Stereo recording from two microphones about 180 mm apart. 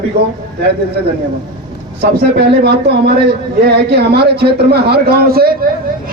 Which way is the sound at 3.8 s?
65° right (ahead or behind).